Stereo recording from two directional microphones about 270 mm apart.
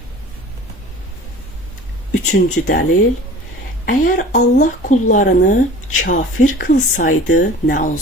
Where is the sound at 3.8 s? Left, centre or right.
Left.